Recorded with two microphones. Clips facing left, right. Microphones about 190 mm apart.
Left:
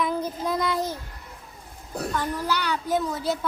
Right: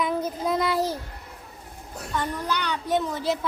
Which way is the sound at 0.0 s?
Centre (ahead or behind).